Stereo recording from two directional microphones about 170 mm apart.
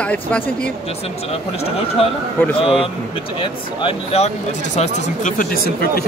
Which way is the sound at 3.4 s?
35° left (ahead or behind).